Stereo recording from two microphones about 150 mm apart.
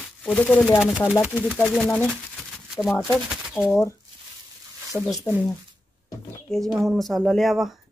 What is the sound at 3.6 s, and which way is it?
Speech, 20° left (ahead or behind).